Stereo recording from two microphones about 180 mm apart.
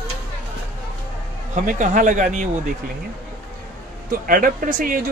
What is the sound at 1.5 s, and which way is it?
Speech, 45° right (ahead or behind).